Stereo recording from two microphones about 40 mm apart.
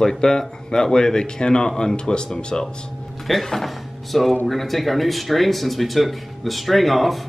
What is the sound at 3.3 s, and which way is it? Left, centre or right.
Speech, centre.